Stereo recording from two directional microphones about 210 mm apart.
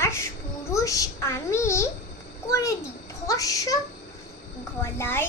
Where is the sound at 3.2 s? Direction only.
15° left (ahead or behind).